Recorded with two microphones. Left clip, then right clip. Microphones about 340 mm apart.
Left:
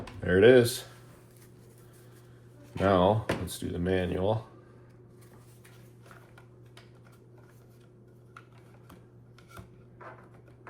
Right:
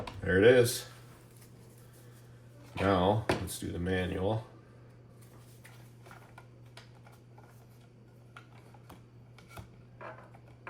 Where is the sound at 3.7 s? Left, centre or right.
Centre.